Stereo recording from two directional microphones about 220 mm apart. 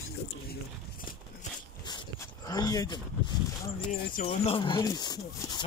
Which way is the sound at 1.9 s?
15° left (ahead or behind).